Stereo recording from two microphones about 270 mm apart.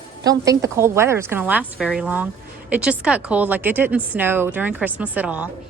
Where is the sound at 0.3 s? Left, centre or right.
Centre.